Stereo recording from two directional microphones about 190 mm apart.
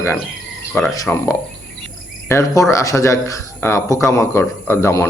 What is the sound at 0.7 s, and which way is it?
Speech, 10° left (ahead or behind).